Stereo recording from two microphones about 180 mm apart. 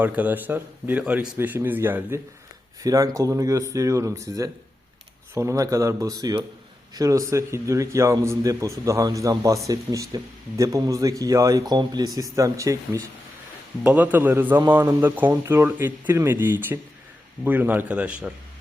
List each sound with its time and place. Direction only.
0.0 s a man's voice: 10° right (ahead or behind)